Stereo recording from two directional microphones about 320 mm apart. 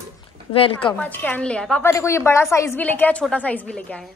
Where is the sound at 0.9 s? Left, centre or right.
Centre.